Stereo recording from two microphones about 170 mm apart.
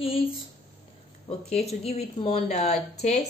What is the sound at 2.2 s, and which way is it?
Speech, 40° left (ahead or behind).